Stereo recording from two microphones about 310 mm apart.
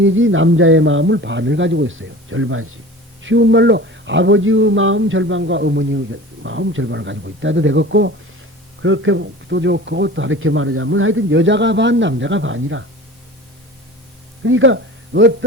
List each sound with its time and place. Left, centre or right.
0.0 s speech: right
14.4 s speech: right